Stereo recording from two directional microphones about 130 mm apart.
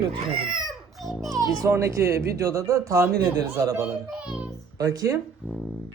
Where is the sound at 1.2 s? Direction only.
25° right (ahead or behind).